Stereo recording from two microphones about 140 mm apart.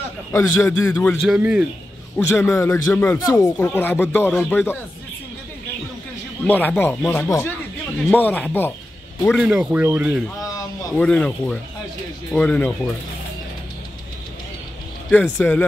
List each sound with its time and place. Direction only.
0.3 s speech: 15° left (ahead or behind)
1.2 s a man's voice: 5° right (ahead or behind)
2.1 s speech: 15° left (ahead or behind)
6.4 s speech: 10° left (ahead or behind)
9.4 s speech: 5° right (ahead or behind)
11.0 s speech: 10° left (ahead or behind)
15.0 s speech: 10° left (ahead or behind)